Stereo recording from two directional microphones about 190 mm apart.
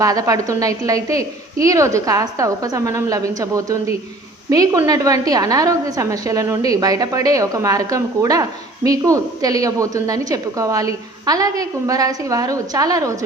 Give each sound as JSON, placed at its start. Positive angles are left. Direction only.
{"t": 0.0, "sound": "a woman's voice", "side_deg": -15}